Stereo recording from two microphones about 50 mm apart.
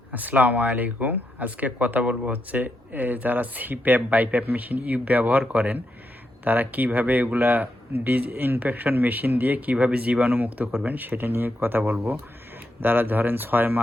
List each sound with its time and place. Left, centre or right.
0.1 s speech: right